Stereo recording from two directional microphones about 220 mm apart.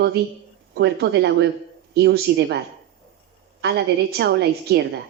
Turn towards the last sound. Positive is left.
turn(degrees=-50)  # may be behind; listen again after turning